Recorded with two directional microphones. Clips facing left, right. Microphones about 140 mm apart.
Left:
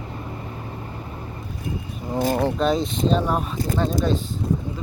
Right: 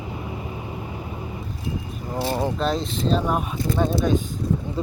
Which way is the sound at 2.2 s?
45° left (ahead or behind).